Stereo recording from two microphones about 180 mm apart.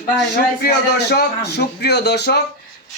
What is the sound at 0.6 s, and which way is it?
Speech, 65° left (ahead or behind).